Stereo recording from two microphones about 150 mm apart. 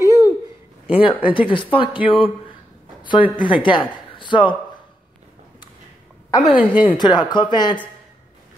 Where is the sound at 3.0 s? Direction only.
30° left (ahead or behind).